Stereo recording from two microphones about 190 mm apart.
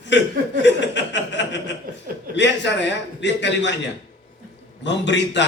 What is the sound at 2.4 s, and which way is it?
A man's voice, 65° left (ahead or behind).